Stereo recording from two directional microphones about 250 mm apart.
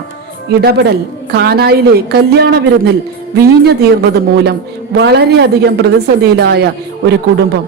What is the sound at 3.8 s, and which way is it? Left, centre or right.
A woman's voice, right.